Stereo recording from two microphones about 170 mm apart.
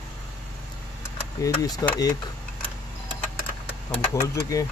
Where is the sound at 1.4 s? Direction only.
20° left (ahead or behind).